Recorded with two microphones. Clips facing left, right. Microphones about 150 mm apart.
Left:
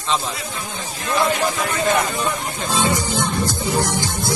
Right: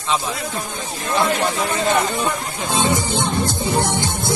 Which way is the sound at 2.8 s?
25° right (ahead or behind).